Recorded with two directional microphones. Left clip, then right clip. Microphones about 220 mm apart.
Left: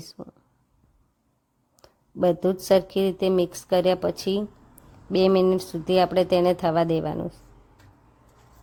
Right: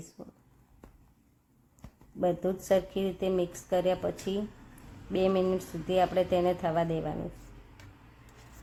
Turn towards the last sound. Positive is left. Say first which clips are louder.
# left 7 dB
turn(degrees=40)  # may be behind; listen again after turning